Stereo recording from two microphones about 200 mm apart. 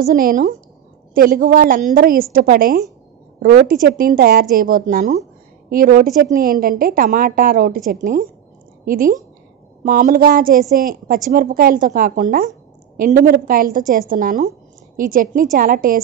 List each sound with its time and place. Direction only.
0.0 s a woman's voice: 45° right (ahead or behind)